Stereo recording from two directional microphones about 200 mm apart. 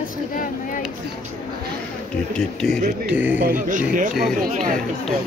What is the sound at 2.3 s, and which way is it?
A man's voice, centre (ahead or behind).